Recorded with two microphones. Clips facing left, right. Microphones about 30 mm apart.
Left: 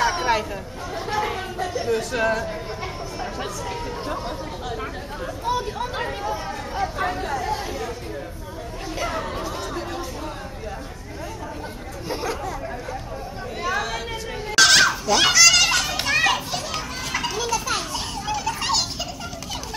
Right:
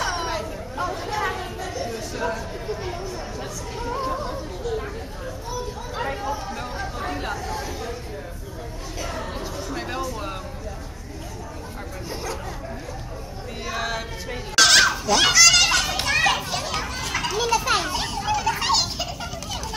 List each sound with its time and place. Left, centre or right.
0.0 s chatter: centre
0.9 s a sound: centre
1.9 s speech: left
4.1 s speech: left
5.5 s speech: left
6.3 s speech: left
12.1 s chatter: centre
13.7 s a sound: centre
14.5 s children playing: centre
17.6 s children playing: centre
18.1 s children playing: centre